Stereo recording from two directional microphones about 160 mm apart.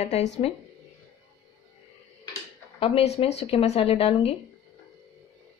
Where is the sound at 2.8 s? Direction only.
35° left (ahead or behind).